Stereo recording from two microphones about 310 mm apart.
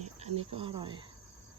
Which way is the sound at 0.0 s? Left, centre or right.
Centre.